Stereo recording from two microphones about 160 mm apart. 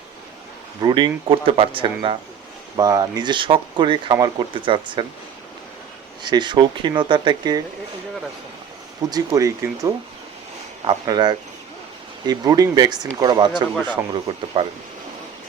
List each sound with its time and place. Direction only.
0.8 s speech: 30° right (ahead or behind)
6.2 s speech: 30° right (ahead or behind)
9.0 s speech: 25° right (ahead or behind)